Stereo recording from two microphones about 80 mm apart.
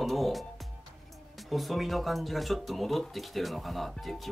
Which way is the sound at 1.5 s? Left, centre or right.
Centre.